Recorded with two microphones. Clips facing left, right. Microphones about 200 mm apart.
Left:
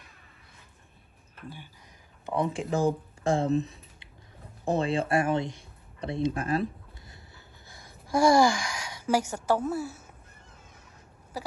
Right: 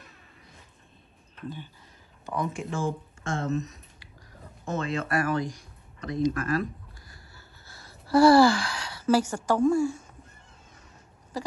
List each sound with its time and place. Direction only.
1.3 s speech: 10° left (ahead or behind)
2.2 s speech: 30° left (ahead or behind); by 10.0 s 5° left (ahead or behind)